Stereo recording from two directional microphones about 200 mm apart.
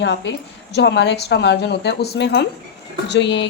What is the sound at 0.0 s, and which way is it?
A woman's voice, 60° left (ahead or behind).